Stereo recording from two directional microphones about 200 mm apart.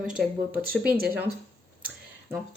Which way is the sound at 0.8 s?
50° right (ahead or behind).